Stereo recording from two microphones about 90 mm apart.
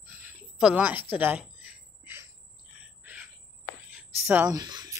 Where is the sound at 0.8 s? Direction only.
20° right (ahead or behind).